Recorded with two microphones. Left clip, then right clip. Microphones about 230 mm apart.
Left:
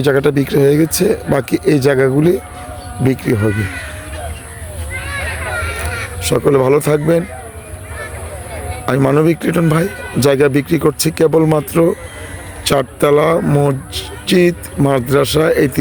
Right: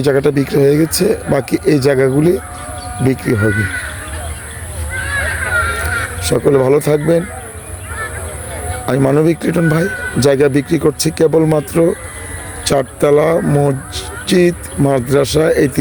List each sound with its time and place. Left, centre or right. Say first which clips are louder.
0.0 s speech: even; centre
3.5 s speech: right 4 dB; left
4.9 s honk: right 5 dB; left
6.2 s speech: even; centre
8.9 s speech: even; centre